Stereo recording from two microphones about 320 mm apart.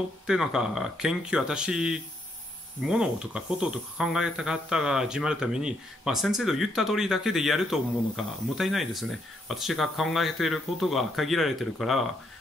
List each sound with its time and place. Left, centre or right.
0.3 s speech: centre